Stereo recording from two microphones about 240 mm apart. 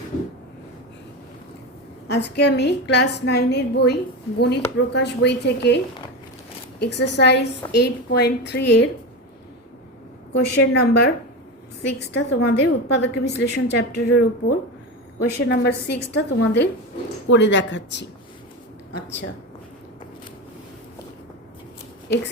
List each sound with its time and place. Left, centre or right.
2.0 s a woman's voice: left
10.3 s a woman's voice: left
15.2 s a woman's voice: left